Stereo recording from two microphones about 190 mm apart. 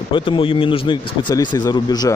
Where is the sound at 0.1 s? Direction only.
30° left (ahead or behind).